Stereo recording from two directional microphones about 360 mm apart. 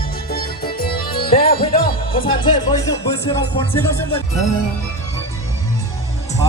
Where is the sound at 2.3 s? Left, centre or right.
Centre.